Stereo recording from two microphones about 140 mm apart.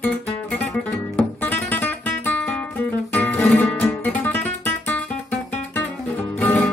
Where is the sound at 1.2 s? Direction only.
10° left (ahead or behind).